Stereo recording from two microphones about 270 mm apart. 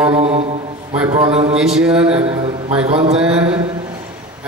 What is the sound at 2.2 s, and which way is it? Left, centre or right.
Speech, right.